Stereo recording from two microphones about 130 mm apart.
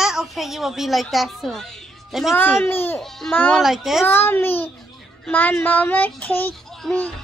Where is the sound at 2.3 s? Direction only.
20° left (ahead or behind).